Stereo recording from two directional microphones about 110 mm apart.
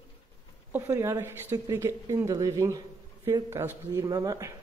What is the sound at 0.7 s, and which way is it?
A woman's voice, 25° right (ahead or behind).